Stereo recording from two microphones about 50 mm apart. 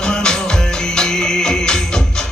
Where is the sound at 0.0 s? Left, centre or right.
Centre.